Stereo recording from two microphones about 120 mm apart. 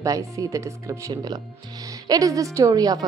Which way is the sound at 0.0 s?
30° right (ahead or behind).